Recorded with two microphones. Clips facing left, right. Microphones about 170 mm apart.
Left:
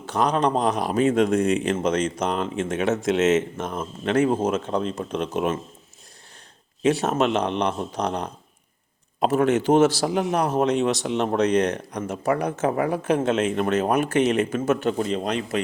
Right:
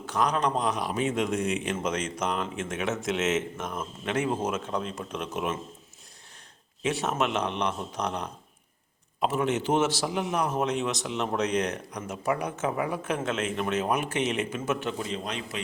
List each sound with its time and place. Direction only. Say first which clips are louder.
0.0 s speech: left 5 dB; 30° left (ahead or behind)
6.8 s speech: left 7 dB; 40° left (ahead or behind)
9.2 s speech: left 7 dB; 50° left (ahead or behind)
11.3 s speech: left 7 dB; 60° left (ahead or behind)
11.9 s speech: left 5 dB; 35° left (ahead or behind)
13.4 s speech: left 6 dB; 50° left (ahead or behind)